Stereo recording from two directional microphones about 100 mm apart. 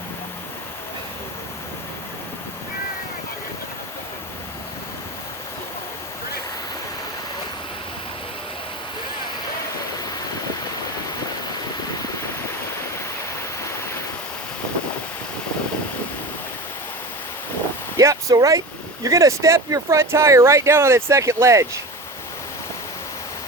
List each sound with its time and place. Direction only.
17.9 s vehicle: 35° right (ahead or behind)
19.0 s speech: 30° right (ahead or behind)